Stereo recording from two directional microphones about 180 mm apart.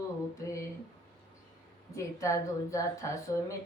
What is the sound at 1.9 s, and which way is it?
A woman's voice, 15° left (ahead or behind).